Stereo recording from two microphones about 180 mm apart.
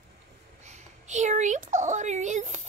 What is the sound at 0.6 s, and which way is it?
A woman's voice, 40° right (ahead or behind).